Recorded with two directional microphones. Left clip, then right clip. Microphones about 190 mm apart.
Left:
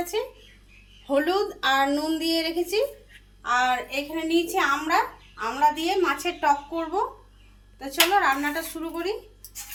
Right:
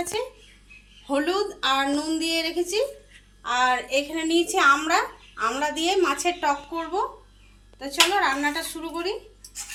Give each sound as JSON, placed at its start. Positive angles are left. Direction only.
{"t": 0.0, "sound": "a woman's voice", "side_deg": 0}
{"t": 4.1, "sound": "a woman's voice", "side_deg": -25}
{"t": 6.2, "sound": "speech", "side_deg": -5}